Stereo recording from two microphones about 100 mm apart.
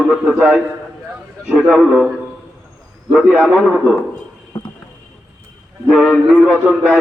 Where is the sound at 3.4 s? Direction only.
10° right (ahead or behind).